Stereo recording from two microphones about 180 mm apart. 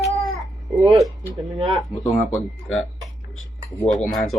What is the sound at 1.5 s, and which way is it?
Speech, 20° right (ahead or behind).